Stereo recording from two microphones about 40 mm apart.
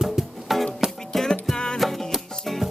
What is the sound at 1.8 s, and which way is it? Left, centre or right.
Music, centre.